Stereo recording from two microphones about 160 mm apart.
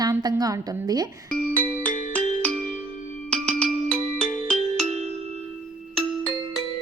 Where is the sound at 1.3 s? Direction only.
10° left (ahead or behind).